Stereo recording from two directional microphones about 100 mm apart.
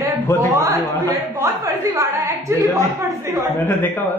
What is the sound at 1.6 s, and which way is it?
A woman's voice, 35° right (ahead or behind).